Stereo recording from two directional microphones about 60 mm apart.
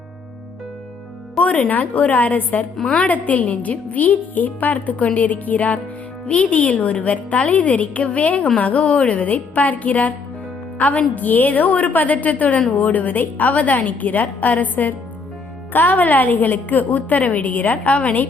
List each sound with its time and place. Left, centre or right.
1.4 s a woman's voice: left